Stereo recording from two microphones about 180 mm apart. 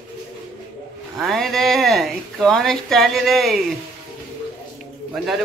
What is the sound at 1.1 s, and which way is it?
Speech, centre (ahead or behind).